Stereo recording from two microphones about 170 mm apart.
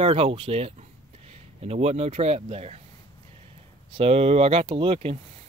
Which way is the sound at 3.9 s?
35° right (ahead or behind).